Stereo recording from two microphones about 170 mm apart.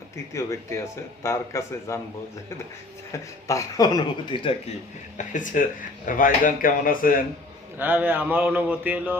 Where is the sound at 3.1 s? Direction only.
20° left (ahead or behind).